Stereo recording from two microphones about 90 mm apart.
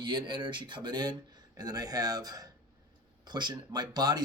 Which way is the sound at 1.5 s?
45° right (ahead or behind).